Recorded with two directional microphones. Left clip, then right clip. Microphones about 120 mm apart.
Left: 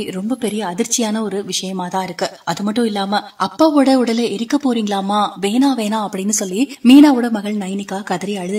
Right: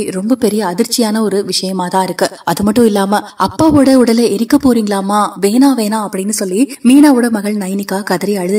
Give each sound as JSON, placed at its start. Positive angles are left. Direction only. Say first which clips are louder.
{"t": 0.3, "sound": "a woman's voice", "louder": "right 9 dB", "side_deg": -40}
{"t": 2.6, "sound": "speech", "louder": "right 9 dB", "side_deg": -65}
{"t": 4.6, "sound": "a woman's voice", "louder": "right 5 dB", "side_deg": -40}
{"t": 6.9, "sound": "a woman's voice", "louder": "right 1 dB", "side_deg": -30}